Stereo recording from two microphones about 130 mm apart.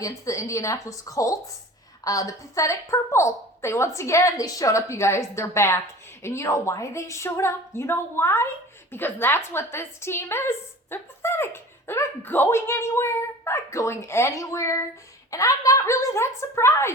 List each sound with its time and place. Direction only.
0.0 s a woman's voice: 25° left (ahead or behind)